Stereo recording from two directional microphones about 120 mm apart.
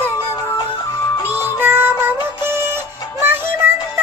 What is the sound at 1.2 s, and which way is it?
Music, 15° right (ahead or behind).